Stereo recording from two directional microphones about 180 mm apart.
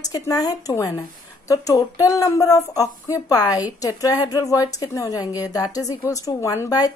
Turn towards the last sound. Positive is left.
turn(degrees=20)  # may be behind; listen again after turning